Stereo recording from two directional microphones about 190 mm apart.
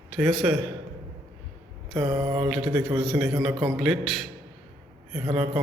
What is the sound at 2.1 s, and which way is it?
Mantra, 5° right (ahead or behind).